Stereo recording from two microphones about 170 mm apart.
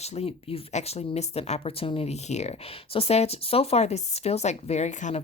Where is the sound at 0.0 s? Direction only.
40° left (ahead or behind).